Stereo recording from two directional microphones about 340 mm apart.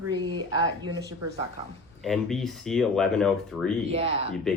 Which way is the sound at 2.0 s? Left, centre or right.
Centre.